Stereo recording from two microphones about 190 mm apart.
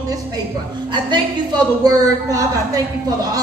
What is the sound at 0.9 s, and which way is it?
A woman's voice, 25° right (ahead or behind).